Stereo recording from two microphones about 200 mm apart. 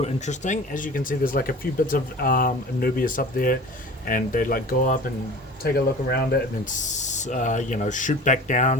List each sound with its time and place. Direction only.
0.0 s speech: 35° left (ahead or behind)
6.7 s speech: 40° left (ahead or behind)